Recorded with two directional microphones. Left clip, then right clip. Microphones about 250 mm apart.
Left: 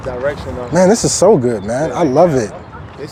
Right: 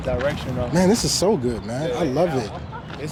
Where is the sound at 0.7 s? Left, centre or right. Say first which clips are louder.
Left 9 dB; left.